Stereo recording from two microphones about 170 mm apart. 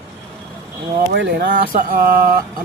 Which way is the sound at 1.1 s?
90° right.